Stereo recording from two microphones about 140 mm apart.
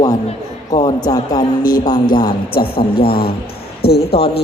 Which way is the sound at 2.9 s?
90° left.